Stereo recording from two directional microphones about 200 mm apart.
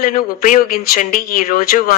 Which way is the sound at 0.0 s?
45° left (ahead or behind).